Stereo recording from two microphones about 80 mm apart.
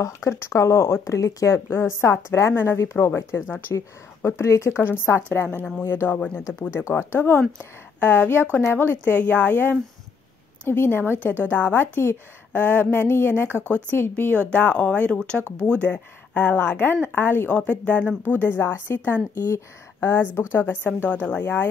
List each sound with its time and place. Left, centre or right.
0.0 s a woman's voice: left
13.6 s speech: right
13.8 s a woman's voice: left; by 15.4 s centre
15.8 s a woman's voice: left